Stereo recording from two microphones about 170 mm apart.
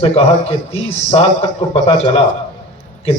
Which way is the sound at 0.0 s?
35° left (ahead or behind).